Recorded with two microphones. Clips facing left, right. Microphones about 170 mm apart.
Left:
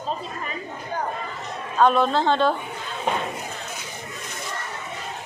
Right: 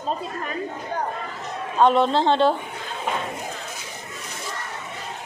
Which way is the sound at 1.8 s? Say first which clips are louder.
Right 1 dB; 25° right (ahead or behind).